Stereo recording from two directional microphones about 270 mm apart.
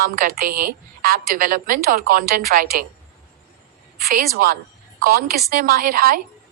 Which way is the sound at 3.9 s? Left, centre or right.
Right.